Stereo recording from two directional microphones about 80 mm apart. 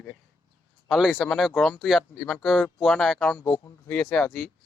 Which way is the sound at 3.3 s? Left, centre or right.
Left.